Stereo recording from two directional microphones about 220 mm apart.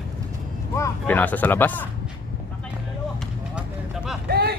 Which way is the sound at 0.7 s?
10° left (ahead or behind).